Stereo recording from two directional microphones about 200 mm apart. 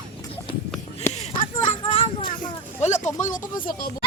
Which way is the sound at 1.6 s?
25° left (ahead or behind).